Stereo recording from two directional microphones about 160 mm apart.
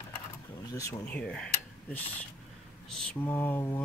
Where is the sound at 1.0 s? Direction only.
10° left (ahead or behind).